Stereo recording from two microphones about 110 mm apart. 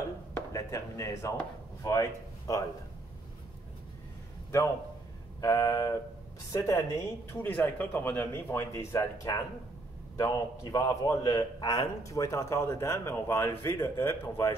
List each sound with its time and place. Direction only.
0.5 s a man's voice: 30° left (ahead or behind)
5.4 s a man's voice: 30° left (ahead or behind)